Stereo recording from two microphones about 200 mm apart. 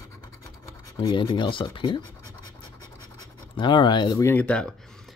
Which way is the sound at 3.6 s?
25° left (ahead or behind).